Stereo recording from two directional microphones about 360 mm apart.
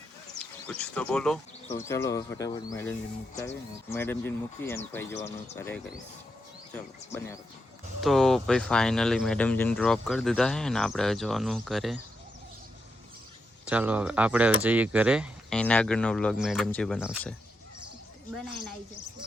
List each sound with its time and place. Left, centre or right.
0.3 s speech: centre
1.6 s speech: centre
1.9 s speech: centre
13.7 s speech: centre